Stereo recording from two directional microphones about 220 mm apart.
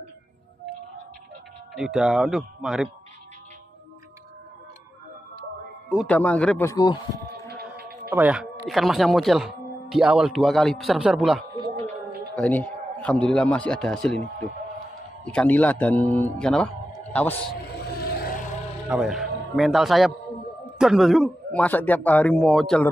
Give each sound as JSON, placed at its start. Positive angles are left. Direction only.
{"t": 1.7, "sound": "speech", "side_deg": 0}
{"t": 6.0, "sound": "a man's voice", "side_deg": 5}
{"t": 7.4, "sound": "music", "side_deg": -45}
{"t": 8.1, "sound": "speech", "side_deg": -5}
{"t": 11.6, "sound": "a sound", "side_deg": -25}
{"t": 12.4, "sound": "speech", "side_deg": 5}
{"t": 15.2, "sound": "a man's voice", "side_deg": 5}
{"t": 17.9, "sound": "a sound", "side_deg": 45}
{"t": 18.9, "sound": "a man's voice", "side_deg": -5}